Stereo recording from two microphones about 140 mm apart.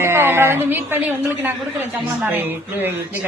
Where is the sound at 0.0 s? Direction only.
15° right (ahead or behind).